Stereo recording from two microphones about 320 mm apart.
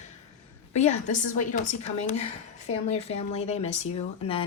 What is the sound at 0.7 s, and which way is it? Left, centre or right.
A woman's voice, left.